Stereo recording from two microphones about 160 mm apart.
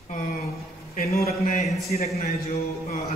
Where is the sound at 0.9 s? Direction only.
65° left (ahead or behind).